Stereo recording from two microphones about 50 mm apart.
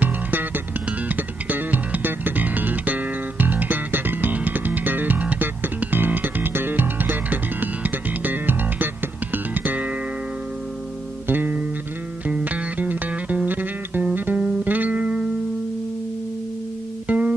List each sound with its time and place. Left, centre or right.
0.0 s music: right
11.2 s music: right
12.3 s music: right
17.1 s music: right